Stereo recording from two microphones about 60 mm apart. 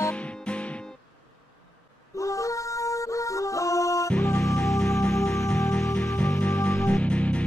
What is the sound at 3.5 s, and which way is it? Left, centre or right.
Music, left.